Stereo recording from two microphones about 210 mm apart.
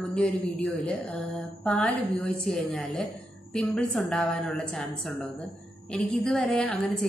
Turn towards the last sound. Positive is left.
turn(degrees=0)  # may be behind; listen again after turning